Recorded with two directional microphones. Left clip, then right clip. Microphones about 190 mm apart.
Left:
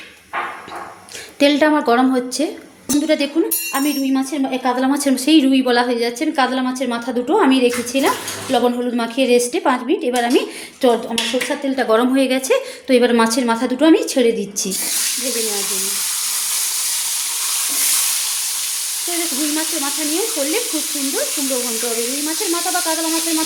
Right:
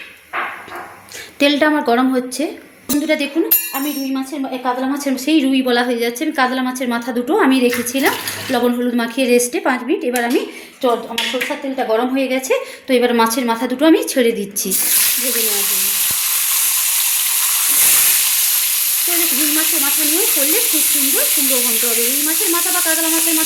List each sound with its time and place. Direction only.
1.4 s a woman's voice: centre (ahead or behind)
4.6 s a woman's voice: 15° left (ahead or behind)
11.8 s a woman's voice: 20° left (ahead or behind); by 14.7 s 5° right (ahead or behind)